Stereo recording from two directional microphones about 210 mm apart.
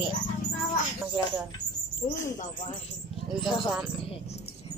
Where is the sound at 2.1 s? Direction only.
15° left (ahead or behind).